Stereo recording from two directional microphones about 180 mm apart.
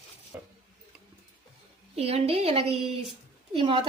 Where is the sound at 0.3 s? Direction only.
10° right (ahead or behind).